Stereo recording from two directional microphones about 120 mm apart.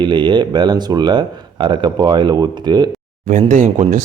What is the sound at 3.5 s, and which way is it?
Speech, 90° right.